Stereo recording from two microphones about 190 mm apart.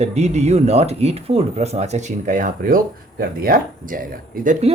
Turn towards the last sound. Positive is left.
turn(degrees=-40)  # may be behind; listen again after turning